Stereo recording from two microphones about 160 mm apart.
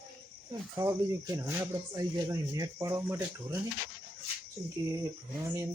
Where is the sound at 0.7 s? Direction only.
20° right (ahead or behind).